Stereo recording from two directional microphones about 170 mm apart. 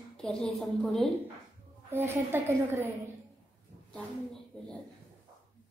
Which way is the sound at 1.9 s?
15° right (ahead or behind).